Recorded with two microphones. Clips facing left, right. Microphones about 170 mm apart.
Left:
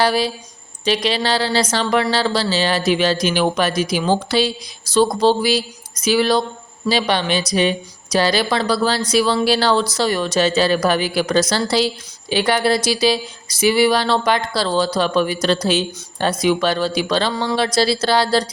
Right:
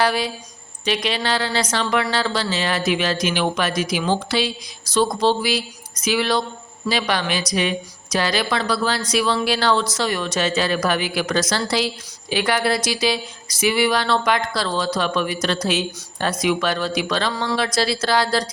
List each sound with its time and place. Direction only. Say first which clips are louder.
0.0 s speech: left 3 dB; 35° left (ahead or behind)